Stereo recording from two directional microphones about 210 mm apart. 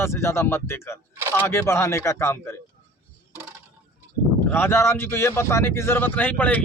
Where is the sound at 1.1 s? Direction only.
10° right (ahead or behind).